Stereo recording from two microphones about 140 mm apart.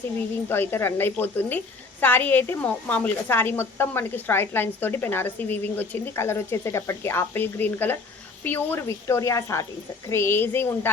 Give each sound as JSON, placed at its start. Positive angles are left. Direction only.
{"t": 0.4, "sound": "a woman's voice", "side_deg": 15}